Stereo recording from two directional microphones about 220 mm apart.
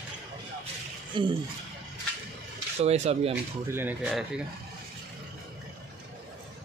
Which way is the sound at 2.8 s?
30° right (ahead or behind).